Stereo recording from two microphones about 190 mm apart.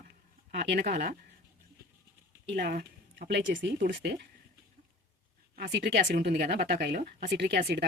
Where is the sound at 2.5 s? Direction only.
50° right (ahead or behind); by 3.7 s 70° right (ahead or behind).